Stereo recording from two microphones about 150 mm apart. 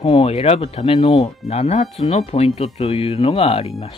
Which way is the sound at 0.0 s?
40° left (ahead or behind).